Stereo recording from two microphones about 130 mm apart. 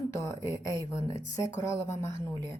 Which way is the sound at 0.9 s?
20° left (ahead or behind).